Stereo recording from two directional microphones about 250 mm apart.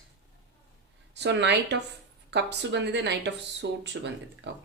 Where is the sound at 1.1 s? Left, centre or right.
Right.